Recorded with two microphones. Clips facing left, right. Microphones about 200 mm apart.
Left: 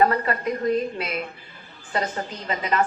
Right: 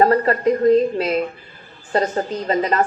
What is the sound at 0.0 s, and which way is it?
A woman's voice, 35° right (ahead or behind).